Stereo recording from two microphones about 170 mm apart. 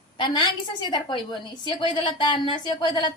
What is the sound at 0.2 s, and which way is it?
Speech, 25° left (ahead or behind).